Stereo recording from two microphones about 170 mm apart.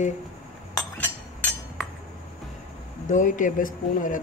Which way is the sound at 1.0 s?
10° left (ahead or behind).